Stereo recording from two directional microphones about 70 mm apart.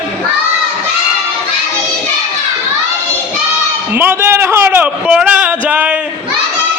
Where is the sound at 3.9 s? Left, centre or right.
Right.